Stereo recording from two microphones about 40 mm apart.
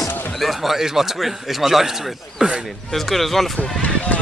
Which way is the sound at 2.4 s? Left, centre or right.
Right.